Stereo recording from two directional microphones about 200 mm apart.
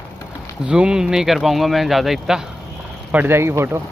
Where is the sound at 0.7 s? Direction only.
5° right (ahead or behind).